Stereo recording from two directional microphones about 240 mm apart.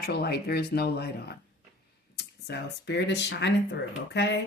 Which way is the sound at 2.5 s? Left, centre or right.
Left.